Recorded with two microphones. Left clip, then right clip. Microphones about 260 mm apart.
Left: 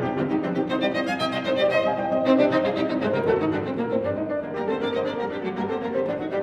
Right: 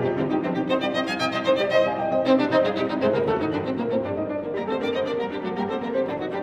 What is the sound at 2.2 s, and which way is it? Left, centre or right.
Music, right.